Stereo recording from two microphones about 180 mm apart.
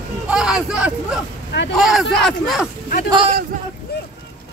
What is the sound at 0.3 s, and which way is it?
Hubbub, 5° right (ahead or behind).